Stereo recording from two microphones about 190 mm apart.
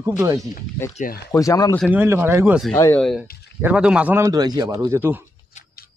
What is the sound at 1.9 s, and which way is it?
Speech, 10° right (ahead or behind).